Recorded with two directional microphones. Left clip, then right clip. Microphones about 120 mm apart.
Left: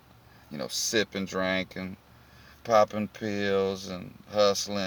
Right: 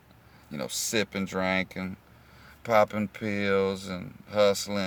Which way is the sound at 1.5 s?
40° right (ahead or behind).